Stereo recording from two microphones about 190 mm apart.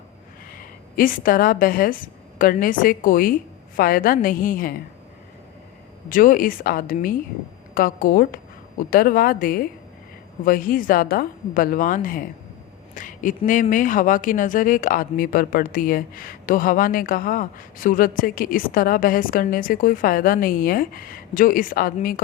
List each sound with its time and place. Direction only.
0.5 s a woman's voice: 45° left (ahead or behind)
6.1 s speech: 45° left (ahead or behind)